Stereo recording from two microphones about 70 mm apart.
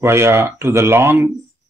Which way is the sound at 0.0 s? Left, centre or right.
Right.